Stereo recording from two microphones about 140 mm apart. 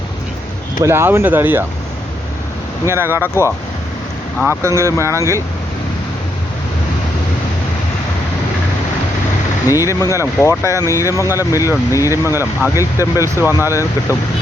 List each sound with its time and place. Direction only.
0.8 s speech: 20° right (ahead or behind)
2.8 s speech: 15° right (ahead or behind)
4.6 s speech: 20° right (ahead or behind)
9.6 s speech: 20° left (ahead or behind)